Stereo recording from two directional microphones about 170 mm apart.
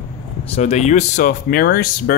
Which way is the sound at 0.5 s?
40° left (ahead or behind).